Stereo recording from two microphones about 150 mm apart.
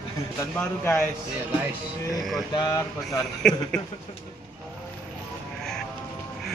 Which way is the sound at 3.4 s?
5° left (ahead or behind).